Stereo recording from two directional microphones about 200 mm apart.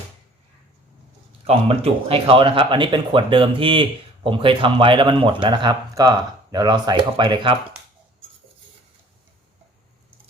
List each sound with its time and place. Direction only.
1.5 s speech: 30° right (ahead or behind)